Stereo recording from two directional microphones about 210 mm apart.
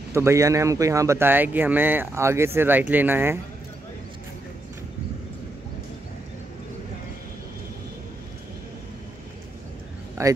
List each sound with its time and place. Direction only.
0.1 s speech: 15° right (ahead or behind)
10.2 s speech: 15° right (ahead or behind)